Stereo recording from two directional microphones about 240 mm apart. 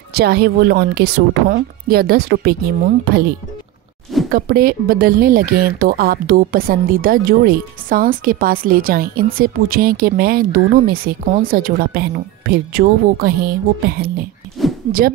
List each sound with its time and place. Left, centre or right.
0.1 s speech: right
4.3 s speech: right